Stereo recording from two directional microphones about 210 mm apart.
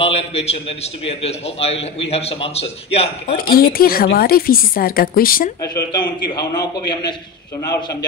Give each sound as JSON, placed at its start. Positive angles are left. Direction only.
{"t": 0.0, "sound": "a man's voice", "side_deg": 30}
{"t": 3.3, "sound": "a woman's voice", "side_deg": 45}
{"t": 5.6, "sound": "a man's voice", "side_deg": 20}